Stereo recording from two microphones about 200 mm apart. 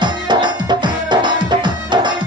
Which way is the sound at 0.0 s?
20° right (ahead or behind).